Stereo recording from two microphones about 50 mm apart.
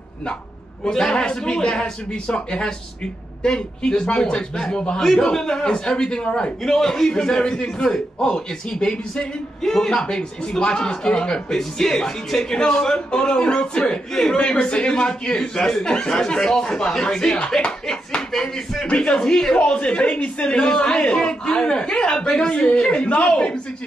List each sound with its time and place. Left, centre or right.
0.8 s a man's voice: centre
18.9 s a woman's voice: left